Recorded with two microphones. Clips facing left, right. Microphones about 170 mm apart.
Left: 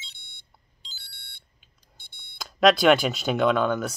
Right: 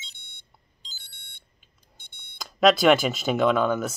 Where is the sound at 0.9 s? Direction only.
45° right (ahead or behind).